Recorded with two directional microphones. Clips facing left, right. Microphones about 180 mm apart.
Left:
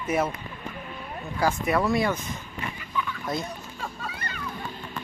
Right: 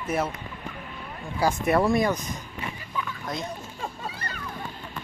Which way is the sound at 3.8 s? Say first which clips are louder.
Right 1 dB; 35° right (ahead or behind).